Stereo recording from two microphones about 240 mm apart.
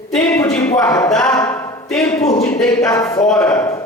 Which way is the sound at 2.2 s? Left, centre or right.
Left.